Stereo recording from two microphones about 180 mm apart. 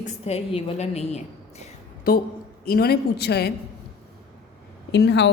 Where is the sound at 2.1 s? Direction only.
50° left (ahead or behind).